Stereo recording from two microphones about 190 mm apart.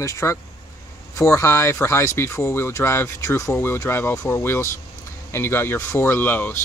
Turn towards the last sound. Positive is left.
turn(degrees=10)  # may be behind; listen again after turning